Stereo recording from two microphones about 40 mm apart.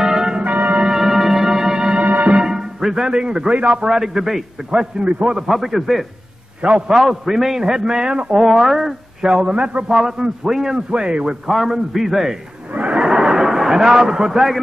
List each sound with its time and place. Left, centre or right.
0.0 s music: centre
0.4 s music: right
0.9 s music: centre
2.0 s music: right
2.5 s a man's voice: centre
4.0 s a man's voice: centre
4.9 s sanding: centre
5.5 s a man's voice: centre; by 8.5 s right
8.5 s a man's voice: centre
9.4 s a man's voice: right
9.8 s a man's voice: centre
10.9 s sanding: right
11.4 s a man's voice: centre
12.9 s a sound: centre